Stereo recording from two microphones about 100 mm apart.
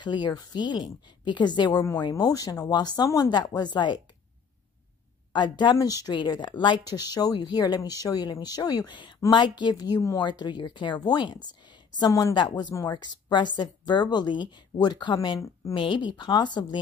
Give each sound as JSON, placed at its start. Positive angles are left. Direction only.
{"t": 0.0, "sound": "speech", "side_deg": 50}
{"t": 5.3, "sound": "speech", "side_deg": 50}
{"t": 12.1, "sound": "a woman's voice", "side_deg": 30}
{"t": 12.4, "sound": "speech", "side_deg": 45}